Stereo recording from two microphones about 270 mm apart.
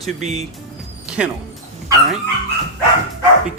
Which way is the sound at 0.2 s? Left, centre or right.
Right.